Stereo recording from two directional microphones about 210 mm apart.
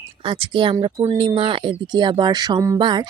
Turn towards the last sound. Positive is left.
turn(degrees=-20)  # may be behind; listen again after turning